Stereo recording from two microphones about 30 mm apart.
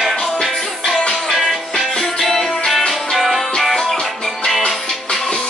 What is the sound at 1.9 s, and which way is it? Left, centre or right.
Music, left.